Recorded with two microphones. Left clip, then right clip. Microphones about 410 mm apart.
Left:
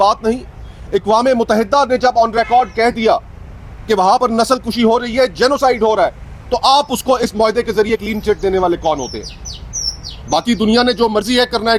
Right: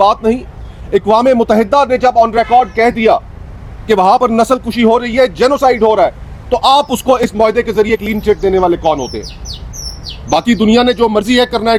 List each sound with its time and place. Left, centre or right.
0.0 s a man's voice: right
0.9 s a man's voice: centre
1.9 s a man's voice: right
2.3 s speech: right
3.8 s a man's voice: right; by 6.1 s centre
6.5 s a man's voice: right; by 11.8 s centre